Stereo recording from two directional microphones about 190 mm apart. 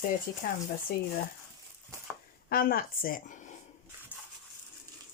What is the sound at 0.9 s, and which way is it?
Speech, 55° left (ahead or behind).